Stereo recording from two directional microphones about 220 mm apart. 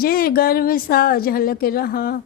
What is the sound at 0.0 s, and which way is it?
A woman's voice, 40° left (ahead or behind).